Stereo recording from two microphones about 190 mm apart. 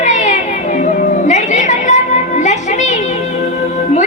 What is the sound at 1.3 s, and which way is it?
Music, 40° left (ahead or behind).